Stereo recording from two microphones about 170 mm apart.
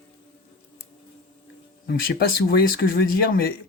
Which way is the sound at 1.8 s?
65° left (ahead or behind).